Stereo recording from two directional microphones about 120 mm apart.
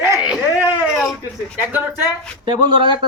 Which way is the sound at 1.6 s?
15° right (ahead or behind).